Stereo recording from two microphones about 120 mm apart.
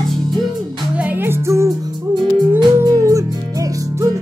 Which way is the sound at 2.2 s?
40° right (ahead or behind).